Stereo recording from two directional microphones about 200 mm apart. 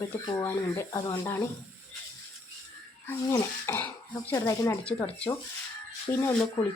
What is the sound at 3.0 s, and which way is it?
Speech, 10° left (ahead or behind).